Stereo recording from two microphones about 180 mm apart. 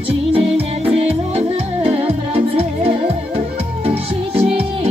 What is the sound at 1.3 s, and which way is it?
Music, 35° right (ahead or behind).